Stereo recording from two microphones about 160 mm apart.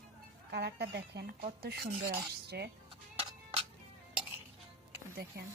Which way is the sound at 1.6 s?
80° right.